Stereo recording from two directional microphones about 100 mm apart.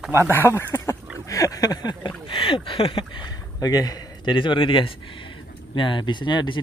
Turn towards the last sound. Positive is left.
turn(degrees=50)  # may be behind; listen again after turning